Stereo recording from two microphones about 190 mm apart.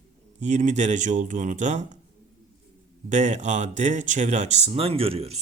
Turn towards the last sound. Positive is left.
turn(degrees=-30)  # may be behind; listen again after turning